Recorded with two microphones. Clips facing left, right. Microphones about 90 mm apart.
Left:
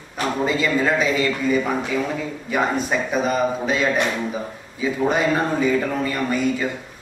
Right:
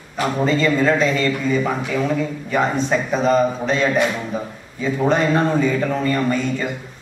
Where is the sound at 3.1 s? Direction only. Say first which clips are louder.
Right 4 dB; 5° left (ahead or behind).